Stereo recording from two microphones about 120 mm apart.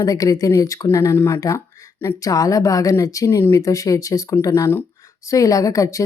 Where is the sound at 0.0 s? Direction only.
30° left (ahead or behind).